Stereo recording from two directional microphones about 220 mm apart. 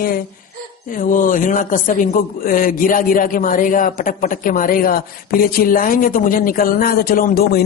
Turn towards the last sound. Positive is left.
turn(degrees=40)  # may be behind; listen again after turning